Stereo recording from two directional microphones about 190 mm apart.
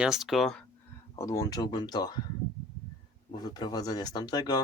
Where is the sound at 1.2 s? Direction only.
15° left (ahead or behind).